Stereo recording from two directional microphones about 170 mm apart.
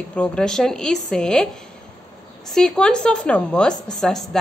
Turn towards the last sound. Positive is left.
turn(degrees=0)  # may be behind; listen again after turning